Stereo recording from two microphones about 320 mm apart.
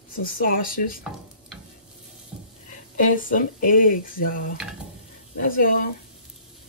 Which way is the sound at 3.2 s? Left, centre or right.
Left.